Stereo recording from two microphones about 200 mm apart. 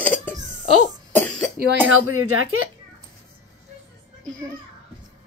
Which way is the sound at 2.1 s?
90° right.